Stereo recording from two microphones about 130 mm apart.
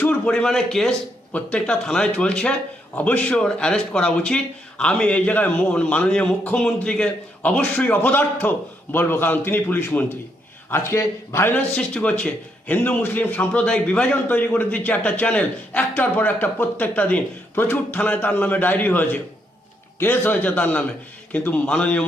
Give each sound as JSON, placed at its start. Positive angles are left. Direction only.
{"t": 0.0, "sound": "a man's voice", "side_deg": 10}
{"t": 11.7, "sound": "a man's voice", "side_deg": 5}